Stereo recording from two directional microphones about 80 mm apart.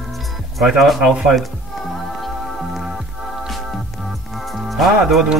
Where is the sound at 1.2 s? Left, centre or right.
Centre.